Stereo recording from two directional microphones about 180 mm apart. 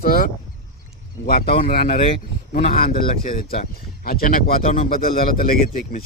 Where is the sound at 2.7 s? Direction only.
55° left (ahead or behind).